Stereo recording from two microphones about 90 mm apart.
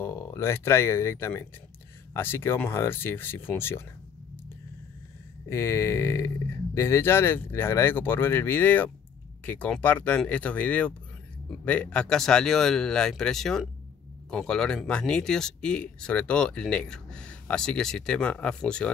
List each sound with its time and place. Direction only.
0.0 s speech: 35° left (ahead or behind)
5.5 s speech: 30° left (ahead or behind); by 18.9 s 10° left (ahead or behind)